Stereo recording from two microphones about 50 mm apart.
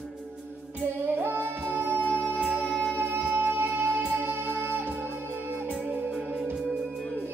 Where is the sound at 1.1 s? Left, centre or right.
Right.